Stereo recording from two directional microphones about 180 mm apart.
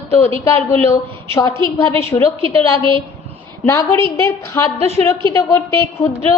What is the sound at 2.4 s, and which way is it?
Speech, 30° right (ahead or behind).